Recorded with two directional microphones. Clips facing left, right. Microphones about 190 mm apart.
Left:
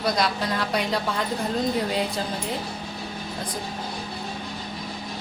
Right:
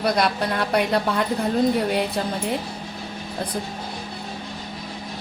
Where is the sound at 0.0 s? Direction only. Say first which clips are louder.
Right 3 dB; 60° right (ahead or behind).